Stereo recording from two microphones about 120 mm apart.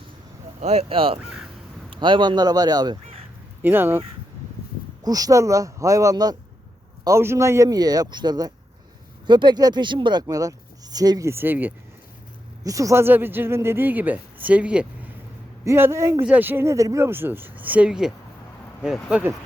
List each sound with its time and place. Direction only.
0.6 s speech: 60° right (ahead or behind); by 3.0 s 35° right (ahead or behind)
3.6 s speech: 15° right (ahead or behind)
5.0 s speech: 30° right (ahead or behind)
11.3 s speech: 15° right (ahead or behind)
12.6 s speech: 25° right (ahead or behind); by 14.8 s 10° right (ahead or behind)
15.6 s speech: 20° right (ahead or behind)